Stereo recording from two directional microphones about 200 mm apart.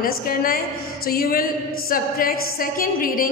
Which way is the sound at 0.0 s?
45° left (ahead or behind).